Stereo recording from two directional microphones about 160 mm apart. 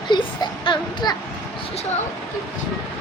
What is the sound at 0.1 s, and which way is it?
Speech, 30° left (ahead or behind).